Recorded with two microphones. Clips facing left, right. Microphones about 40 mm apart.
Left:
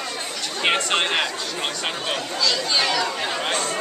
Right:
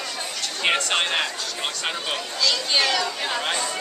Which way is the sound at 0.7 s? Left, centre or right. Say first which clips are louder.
Left 1 dB; centre.